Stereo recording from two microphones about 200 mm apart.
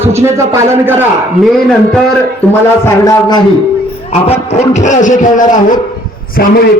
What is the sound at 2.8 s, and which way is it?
Speech, 15° left (ahead or behind).